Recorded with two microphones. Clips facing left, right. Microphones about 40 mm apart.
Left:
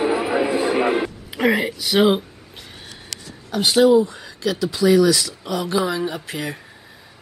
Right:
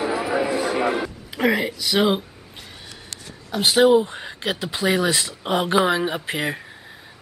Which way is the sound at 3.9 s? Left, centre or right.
Right.